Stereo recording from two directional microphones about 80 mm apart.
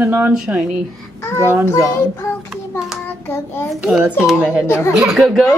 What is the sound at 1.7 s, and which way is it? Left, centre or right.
Child singing, left.